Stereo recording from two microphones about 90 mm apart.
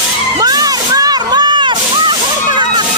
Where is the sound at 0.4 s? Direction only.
45° right (ahead or behind); by 2.1 s 60° right (ahead or behind).